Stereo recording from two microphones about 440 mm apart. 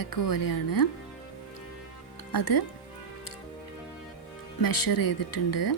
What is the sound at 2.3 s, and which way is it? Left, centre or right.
Speech, left.